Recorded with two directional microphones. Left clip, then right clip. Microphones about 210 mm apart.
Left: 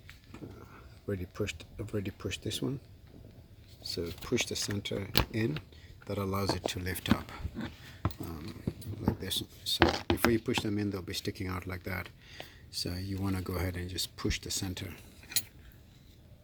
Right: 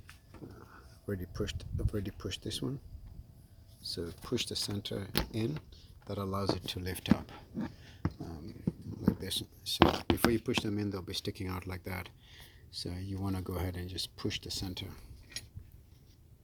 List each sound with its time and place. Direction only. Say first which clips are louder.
0.6 s speech: left 2 dB; 5° right (ahead or behind)
3.8 s speech: left 3 dB; centre (ahead or behind)
9.8 s speech: even; 45° right (ahead or behind)
10.3 s speech: left 2 dB; 5° right (ahead or behind)